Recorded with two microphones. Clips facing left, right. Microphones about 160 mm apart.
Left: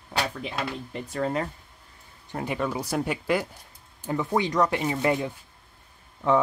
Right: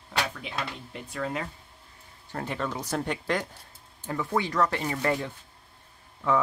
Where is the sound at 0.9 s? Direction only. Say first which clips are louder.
Left 6 dB; 40° left (ahead or behind).